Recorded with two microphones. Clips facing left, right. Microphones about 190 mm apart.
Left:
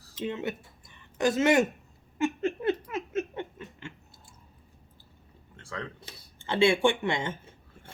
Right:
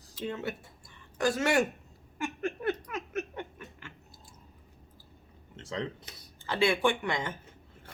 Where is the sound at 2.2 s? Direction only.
25° left (ahead or behind).